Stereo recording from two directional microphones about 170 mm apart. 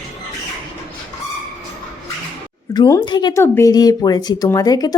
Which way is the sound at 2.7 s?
25° left (ahead or behind).